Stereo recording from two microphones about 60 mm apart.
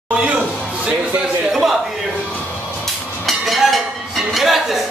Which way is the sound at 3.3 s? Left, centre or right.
Centre.